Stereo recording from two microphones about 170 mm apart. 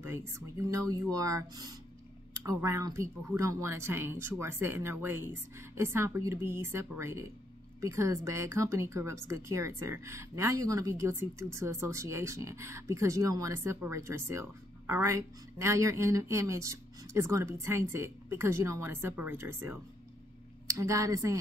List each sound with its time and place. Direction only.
0.0 s speech: 15° right (ahead or behind)